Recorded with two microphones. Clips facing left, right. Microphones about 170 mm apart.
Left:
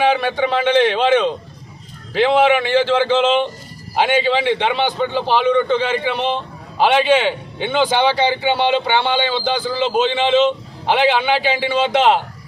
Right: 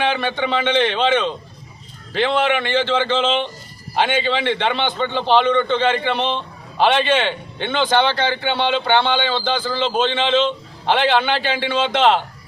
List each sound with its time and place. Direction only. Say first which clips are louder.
0.0 s a man's voice: left 4 dB; 5° left (ahead or behind)